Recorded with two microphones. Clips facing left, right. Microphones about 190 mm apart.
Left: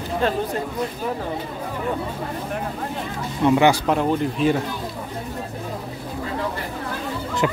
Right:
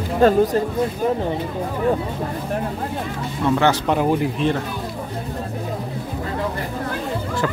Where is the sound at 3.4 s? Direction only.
15° left (ahead or behind).